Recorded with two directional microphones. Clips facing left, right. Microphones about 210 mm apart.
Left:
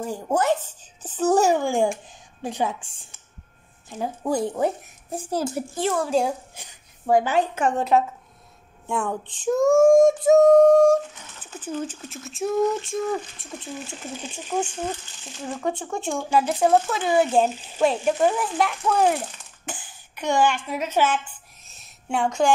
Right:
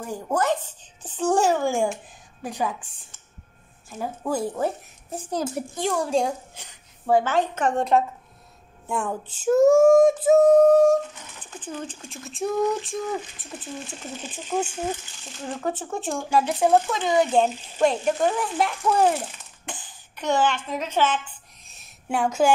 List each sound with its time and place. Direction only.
1.0 s speech: 5° left (ahead or behind)
2.4 s a woman's voice: 25° left (ahead or behind)
4.0 s a woman's voice: 15° left (ahead or behind); by 9.1 s centre (ahead or behind)
9.3 s female singing: 5° right (ahead or behind)
14.3 s speech: 5° right (ahead or behind)
15.5 s female singing: 5° right (ahead or behind)
19.6 s speech: 5° left (ahead or behind)
21.6 s a sound: 5° right (ahead or behind)